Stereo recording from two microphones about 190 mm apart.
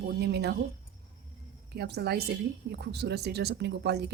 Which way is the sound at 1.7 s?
60° right (ahead or behind).